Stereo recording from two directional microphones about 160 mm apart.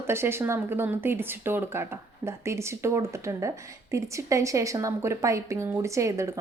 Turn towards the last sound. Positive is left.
turn(degrees=-20)  # may be behind; listen again after turning